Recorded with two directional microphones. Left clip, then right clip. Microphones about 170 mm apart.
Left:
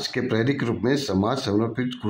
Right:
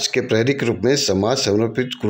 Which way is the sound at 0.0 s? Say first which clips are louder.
Right 6 dB; 40° right (ahead or behind).